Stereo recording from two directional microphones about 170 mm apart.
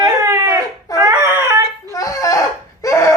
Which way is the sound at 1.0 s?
20° right (ahead or behind).